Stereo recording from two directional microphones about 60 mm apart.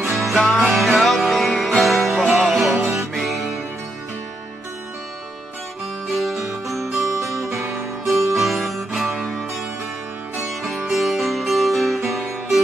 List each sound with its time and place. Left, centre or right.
0.2 s music: centre
6.1 s music: centre
7.1 s music: right
8.0 s music: centre